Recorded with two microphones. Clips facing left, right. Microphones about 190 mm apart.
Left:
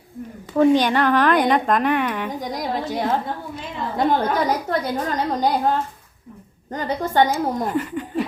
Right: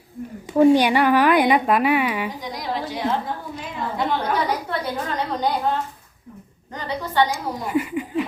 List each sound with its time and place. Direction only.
0.5 s a woman's voice: 10° right (ahead or behind)
2.3 s a woman's voice: 45° left (ahead or behind)
7.7 s a woman's voice: 10° right (ahead or behind)